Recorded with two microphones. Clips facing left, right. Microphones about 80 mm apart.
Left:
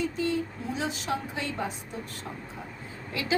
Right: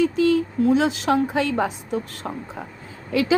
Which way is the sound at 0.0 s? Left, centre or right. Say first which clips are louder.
Right 10 dB; right.